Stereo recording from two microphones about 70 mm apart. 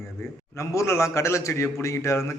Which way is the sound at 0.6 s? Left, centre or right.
Left.